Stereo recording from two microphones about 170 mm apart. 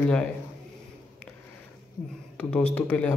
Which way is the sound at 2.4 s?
10° left (ahead or behind).